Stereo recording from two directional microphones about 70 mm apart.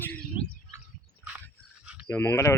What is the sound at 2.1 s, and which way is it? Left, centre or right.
Speech, left.